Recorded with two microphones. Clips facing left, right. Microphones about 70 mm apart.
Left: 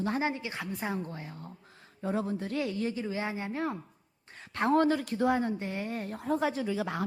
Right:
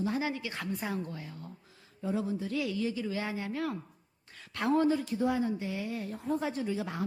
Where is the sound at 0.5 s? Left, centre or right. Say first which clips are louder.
Left 1 dB; left.